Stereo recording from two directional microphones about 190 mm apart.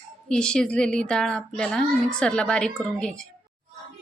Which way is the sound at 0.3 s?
5° left (ahead or behind).